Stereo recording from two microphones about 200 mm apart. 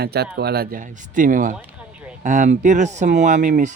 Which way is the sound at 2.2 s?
35° right (ahead or behind).